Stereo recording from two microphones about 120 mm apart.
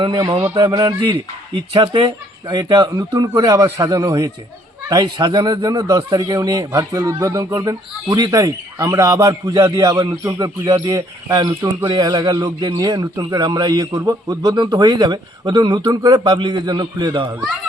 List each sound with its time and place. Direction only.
0.0 s speech: 45° right (ahead or behind)
1.5 s speech: 40° right (ahead or behind)